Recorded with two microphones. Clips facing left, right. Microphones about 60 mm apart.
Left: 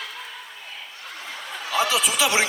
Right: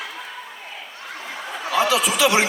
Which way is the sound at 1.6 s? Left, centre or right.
Right.